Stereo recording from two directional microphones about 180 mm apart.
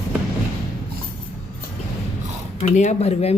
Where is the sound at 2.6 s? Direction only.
40° left (ahead or behind).